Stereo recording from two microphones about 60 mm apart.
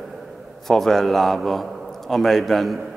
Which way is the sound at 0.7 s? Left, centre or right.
Centre.